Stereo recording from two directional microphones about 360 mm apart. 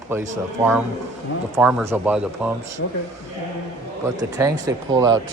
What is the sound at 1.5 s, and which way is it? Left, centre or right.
Speech, centre.